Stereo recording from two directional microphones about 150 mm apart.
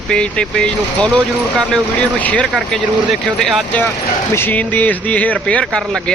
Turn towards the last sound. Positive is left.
turn(degrees=5)  # may be behind; listen again after turning